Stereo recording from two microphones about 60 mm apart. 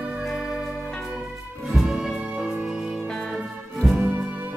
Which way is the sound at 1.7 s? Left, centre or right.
Centre.